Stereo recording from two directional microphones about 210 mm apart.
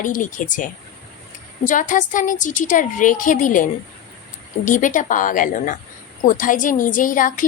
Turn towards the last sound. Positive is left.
turn(degrees=40)  # may be behind; listen again after turning